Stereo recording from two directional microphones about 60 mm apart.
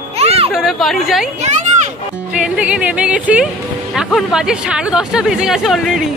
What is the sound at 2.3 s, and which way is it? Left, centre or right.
Speech, centre.